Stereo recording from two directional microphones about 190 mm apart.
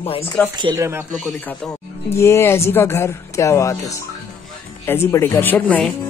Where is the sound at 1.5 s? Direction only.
5° left (ahead or behind).